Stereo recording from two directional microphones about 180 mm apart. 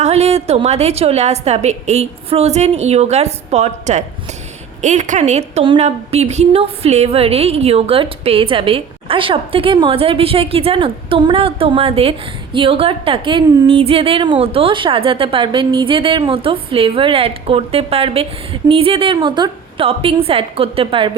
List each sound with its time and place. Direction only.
0.0 s a woman's voice: 35° right (ahead or behind)